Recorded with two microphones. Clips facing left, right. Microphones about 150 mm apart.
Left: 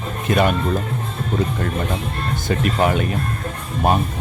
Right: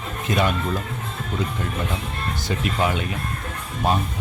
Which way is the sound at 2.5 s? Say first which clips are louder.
Left 5 dB; 50° left (ahead or behind).